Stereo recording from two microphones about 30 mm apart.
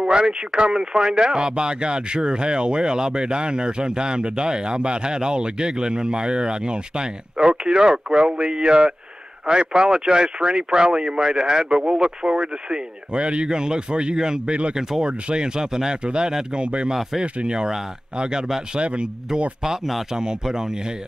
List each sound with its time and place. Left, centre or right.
0.0 s speech: right
0.7 s speech: centre
7.9 s speech: centre; by 13.5 s right
13.5 s speech: right
14.1 s speech: centre
15.2 s speech: right
15.6 s a man's voice: centre
15.9 s a man's voice: right
17.5 s speech: centre
18.8 s a man's voice: right